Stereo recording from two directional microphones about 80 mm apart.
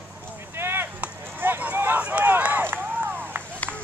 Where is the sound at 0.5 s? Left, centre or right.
Right.